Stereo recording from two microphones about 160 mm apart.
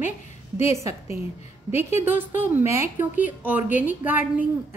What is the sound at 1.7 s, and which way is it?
Speech, 45° left (ahead or behind).